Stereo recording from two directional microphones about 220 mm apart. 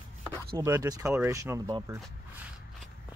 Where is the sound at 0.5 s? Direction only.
15° right (ahead or behind).